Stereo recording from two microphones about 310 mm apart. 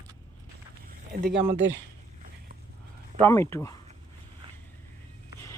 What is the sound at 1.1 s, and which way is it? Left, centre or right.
Speech, right.